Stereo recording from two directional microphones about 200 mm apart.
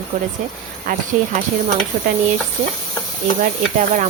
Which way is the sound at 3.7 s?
40° right (ahead or behind).